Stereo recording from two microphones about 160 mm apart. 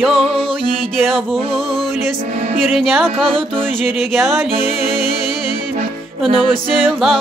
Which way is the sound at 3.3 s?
35° right (ahead or behind).